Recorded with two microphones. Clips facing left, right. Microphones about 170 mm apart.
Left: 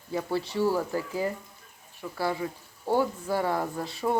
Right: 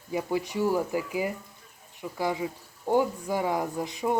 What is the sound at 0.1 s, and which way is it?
Speech, 15° right (ahead or behind).